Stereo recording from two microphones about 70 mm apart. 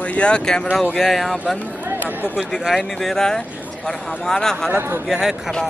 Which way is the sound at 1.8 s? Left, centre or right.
Right.